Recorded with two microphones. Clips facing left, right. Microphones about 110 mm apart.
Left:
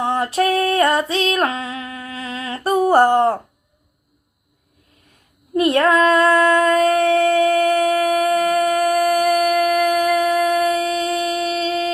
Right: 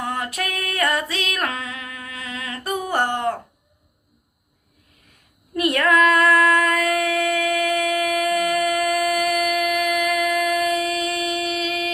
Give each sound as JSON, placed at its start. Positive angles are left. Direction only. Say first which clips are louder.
{"t": 0.0, "sound": "female singing", "louder": "left 8 dB", "side_deg": 30}
{"t": 5.5, "sound": "singing", "louder": "left 4 dB", "side_deg": 30}